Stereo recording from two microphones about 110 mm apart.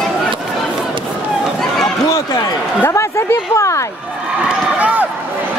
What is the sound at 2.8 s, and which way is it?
Speech, 25° left (ahead or behind).